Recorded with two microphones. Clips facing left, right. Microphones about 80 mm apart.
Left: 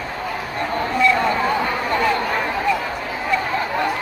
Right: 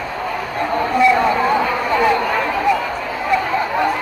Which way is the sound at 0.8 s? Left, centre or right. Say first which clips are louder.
Right 4 dB; centre.